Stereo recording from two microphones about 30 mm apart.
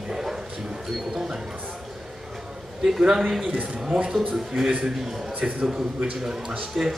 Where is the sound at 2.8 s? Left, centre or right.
Centre.